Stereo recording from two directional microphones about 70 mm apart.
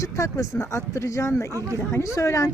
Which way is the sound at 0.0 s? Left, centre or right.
Left.